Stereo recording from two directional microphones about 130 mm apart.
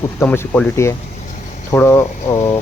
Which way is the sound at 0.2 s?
15° left (ahead or behind).